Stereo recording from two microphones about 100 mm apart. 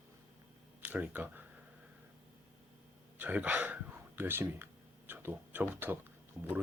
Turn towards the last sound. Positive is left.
turn(degrees=-25)  # may be behind; listen again after turning